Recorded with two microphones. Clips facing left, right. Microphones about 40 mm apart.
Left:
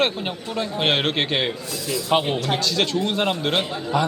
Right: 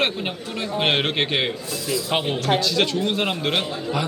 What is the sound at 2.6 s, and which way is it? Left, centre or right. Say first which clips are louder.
Speech: right 1 dB; centre.